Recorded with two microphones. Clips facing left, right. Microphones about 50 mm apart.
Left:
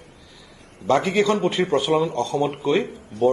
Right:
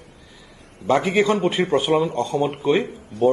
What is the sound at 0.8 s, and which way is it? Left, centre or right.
A man's voice, centre.